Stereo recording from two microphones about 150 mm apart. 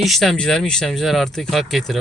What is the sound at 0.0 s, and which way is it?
Speech, centre (ahead or behind).